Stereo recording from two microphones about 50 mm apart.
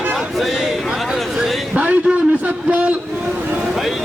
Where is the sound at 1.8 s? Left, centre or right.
Right.